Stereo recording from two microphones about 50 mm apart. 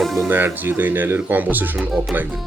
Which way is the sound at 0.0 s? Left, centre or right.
Centre.